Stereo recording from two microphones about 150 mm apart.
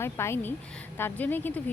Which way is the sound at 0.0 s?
15° left (ahead or behind).